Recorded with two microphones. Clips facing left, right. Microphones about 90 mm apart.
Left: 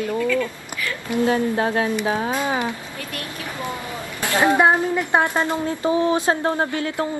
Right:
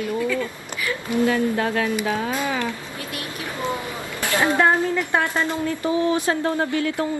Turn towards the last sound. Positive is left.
turn(degrees=40)  # may be behind; listen again after turning